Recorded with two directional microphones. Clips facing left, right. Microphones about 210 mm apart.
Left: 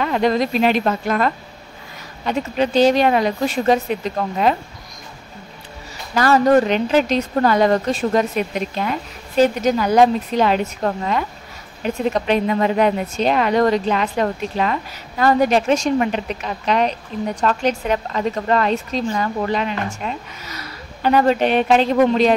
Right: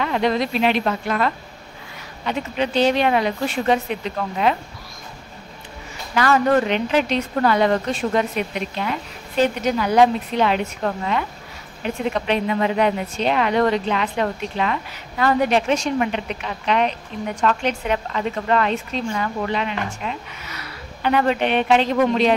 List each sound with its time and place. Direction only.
0.0 s a woman's voice: 45° left (ahead or behind)
6.1 s a woman's voice: 40° left (ahead or behind)